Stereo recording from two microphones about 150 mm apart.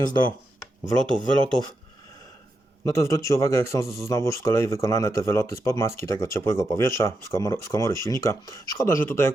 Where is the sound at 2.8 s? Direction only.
20° left (ahead or behind).